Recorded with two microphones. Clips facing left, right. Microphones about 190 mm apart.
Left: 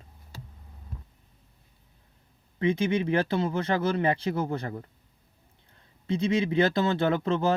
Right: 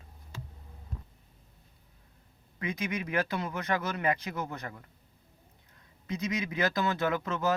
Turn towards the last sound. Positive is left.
turn(degrees=30)  # may be behind; listen again after turning